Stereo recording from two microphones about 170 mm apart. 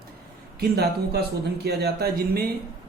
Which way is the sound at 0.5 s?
65° right (ahead or behind).